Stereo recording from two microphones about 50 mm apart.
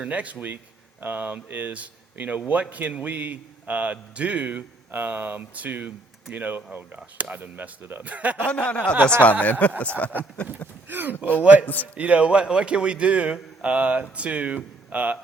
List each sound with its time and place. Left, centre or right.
0.0 s a man's voice: right
8.4 s speech: left
10.8 s speech: right
11.6 s speech: left
11.9 s a man's voice: right